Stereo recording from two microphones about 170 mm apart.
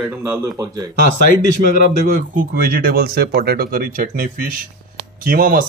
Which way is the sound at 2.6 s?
60° right (ahead or behind).